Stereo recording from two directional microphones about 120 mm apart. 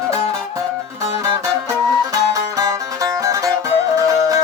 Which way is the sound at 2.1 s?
30° right (ahead or behind).